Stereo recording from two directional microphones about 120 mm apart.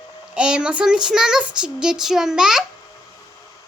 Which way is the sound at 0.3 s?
10° right (ahead or behind).